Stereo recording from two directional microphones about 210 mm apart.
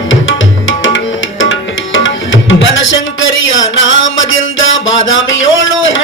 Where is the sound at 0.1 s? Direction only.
65° left (ahead or behind).